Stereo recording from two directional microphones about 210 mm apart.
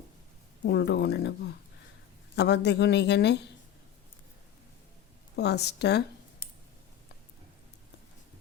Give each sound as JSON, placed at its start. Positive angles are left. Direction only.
{"t": 0.6, "sound": "a woman's voice", "side_deg": 55}
{"t": 2.3, "sound": "a woman's voice", "side_deg": 55}
{"t": 5.4, "sound": "a woman's voice", "side_deg": 55}